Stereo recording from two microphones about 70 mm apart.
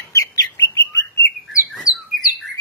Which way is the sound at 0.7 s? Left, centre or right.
Left.